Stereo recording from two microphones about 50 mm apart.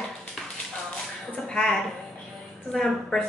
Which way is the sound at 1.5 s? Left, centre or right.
Centre.